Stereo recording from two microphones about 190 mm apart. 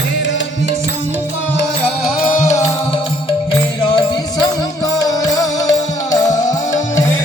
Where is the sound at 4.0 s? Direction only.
20° left (ahead or behind).